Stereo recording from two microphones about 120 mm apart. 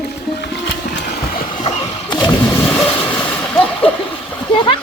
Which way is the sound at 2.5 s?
20° left (ahead or behind).